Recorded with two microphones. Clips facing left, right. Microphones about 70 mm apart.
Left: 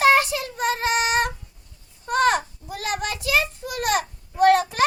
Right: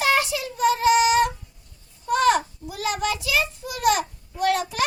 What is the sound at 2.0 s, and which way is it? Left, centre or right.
Child singing, left.